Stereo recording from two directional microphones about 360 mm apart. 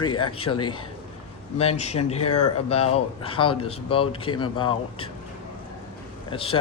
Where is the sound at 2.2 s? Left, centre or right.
Left.